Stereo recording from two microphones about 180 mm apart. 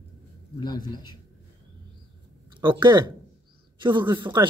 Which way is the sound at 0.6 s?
20° left (ahead or behind).